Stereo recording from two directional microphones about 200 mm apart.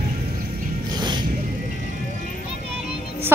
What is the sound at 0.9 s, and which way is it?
Music, 20° right (ahead or behind).